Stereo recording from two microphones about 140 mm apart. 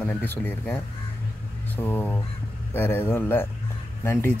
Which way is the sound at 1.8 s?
15° left (ahead or behind).